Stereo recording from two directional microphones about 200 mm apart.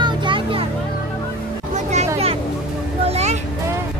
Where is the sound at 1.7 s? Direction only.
35° right (ahead or behind).